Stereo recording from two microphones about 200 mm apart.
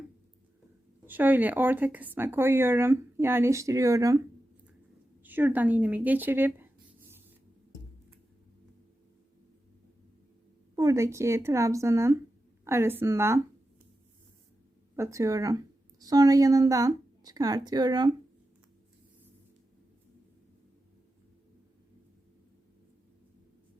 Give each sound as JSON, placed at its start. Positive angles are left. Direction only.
{"t": 1.0, "sound": "speech", "side_deg": -10}
{"t": 5.2, "sound": "speech", "side_deg": -10}
{"t": 10.8, "sound": "speech", "side_deg": -15}
{"t": 14.9, "sound": "a woman's voice", "side_deg": -15}